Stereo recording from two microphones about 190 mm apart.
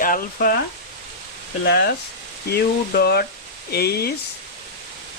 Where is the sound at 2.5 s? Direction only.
55° left (ahead or behind).